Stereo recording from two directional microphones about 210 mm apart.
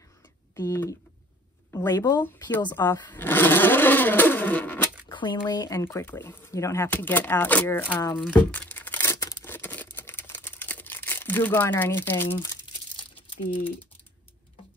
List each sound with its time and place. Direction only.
0.6 s speech: 15° left (ahead or behind)
5.0 s speech: 20° left (ahead or behind)
7.9 s speech: 20° left (ahead or behind)
8.3 s tearing: 10° left (ahead or behind)